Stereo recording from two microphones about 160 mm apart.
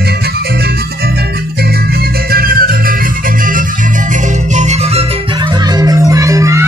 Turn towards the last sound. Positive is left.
turn(degrees=-20)  # may be behind; listen again after turning